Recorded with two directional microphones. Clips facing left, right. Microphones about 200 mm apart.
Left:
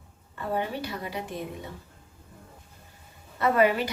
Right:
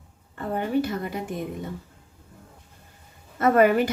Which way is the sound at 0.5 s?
50° right (ahead or behind).